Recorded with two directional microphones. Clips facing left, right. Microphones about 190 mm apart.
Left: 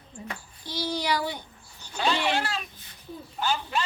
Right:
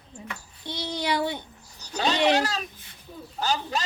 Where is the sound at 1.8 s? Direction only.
40° right (ahead or behind).